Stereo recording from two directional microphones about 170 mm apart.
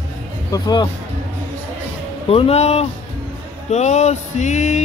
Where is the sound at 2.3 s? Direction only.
35° left (ahead or behind).